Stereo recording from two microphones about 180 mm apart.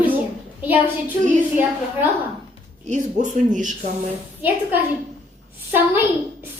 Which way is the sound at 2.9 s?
45° right (ahead or behind).